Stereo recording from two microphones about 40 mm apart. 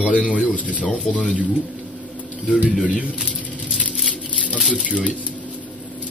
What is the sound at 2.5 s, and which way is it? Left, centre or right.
Speech, right.